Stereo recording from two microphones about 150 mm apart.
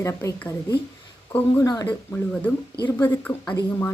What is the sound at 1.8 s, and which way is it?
Speech, 10° left (ahead or behind).